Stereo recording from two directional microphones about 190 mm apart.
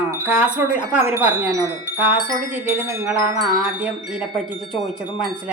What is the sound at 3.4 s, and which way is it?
Chime, 5° right (ahead or behind).